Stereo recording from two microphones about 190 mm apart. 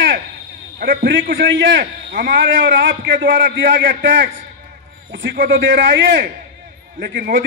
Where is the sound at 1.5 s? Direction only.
75° right (ahead or behind).